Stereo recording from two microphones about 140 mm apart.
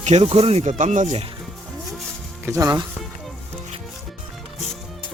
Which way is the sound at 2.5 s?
25° right (ahead or behind).